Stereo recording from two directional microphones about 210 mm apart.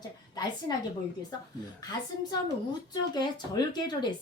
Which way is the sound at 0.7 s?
15° left (ahead or behind).